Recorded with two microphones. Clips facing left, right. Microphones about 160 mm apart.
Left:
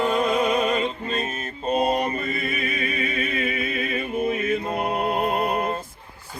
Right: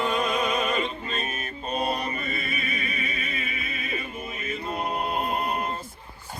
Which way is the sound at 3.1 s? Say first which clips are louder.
Left 8 dB; 55° left (ahead or behind).